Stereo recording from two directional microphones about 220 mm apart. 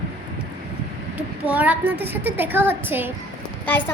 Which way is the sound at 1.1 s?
10° right (ahead or behind).